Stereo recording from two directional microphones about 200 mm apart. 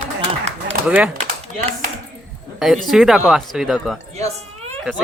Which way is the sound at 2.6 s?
Centre (ahead or behind).